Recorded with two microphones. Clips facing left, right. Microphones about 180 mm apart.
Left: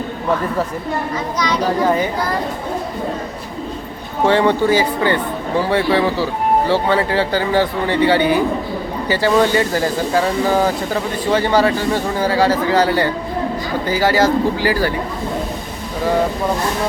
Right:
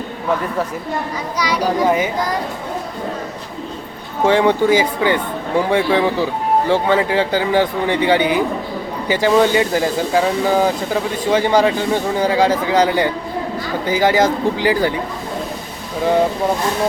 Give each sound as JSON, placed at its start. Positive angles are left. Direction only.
{"t": 1.4, "sound": "speech", "side_deg": -10}
{"t": 4.3, "sound": "speech", "side_deg": -15}